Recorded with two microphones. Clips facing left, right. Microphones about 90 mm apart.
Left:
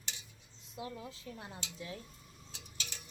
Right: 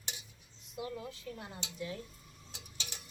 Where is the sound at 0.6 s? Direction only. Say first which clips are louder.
Right 3 dB; 25° left (ahead or behind).